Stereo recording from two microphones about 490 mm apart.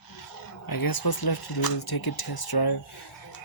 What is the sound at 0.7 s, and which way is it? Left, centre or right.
Speech, left.